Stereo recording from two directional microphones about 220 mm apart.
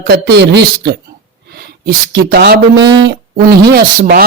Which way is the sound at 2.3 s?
45° right (ahead or behind).